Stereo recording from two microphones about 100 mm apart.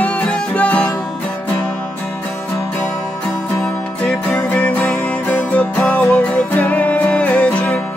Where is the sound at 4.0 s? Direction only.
15° left (ahead or behind).